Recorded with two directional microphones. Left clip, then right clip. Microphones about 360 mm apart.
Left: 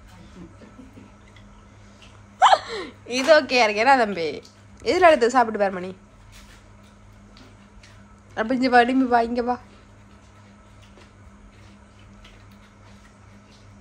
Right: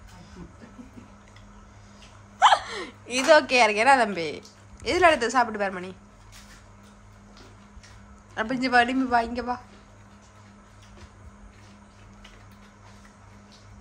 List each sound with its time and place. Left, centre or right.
2.3 s a man's voice: centre
8.4 s a man's voice: centre